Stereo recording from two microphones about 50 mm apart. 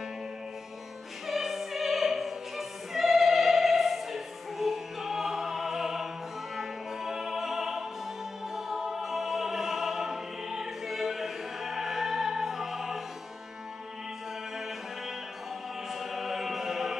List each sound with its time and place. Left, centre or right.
1.2 s opera: centre
6.5 s music: centre
15.9 s music: centre